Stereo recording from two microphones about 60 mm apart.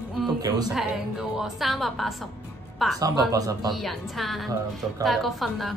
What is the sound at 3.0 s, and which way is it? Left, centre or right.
Speech, right.